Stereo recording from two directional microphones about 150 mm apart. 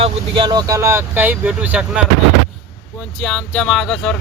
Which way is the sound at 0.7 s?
20° right (ahead or behind).